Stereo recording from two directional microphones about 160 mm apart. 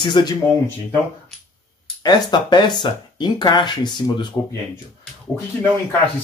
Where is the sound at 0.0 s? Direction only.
30° left (ahead or behind).